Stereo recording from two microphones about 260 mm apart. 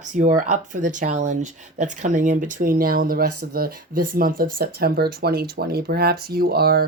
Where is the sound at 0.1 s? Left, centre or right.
Right.